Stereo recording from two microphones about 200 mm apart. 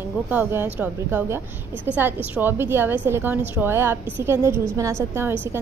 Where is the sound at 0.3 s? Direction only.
10° right (ahead or behind).